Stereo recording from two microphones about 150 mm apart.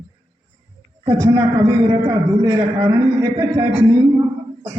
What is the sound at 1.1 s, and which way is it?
A man's voice, 20° right (ahead or behind).